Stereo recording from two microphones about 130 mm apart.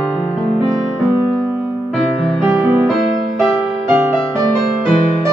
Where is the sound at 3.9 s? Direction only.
15° right (ahead or behind).